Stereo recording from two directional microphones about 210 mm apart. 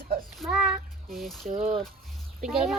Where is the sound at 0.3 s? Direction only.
Centre (ahead or behind).